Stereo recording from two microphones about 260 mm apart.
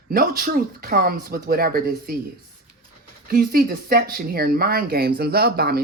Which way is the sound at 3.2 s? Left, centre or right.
Right.